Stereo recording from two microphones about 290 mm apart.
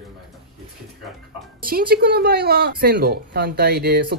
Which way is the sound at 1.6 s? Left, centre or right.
Right.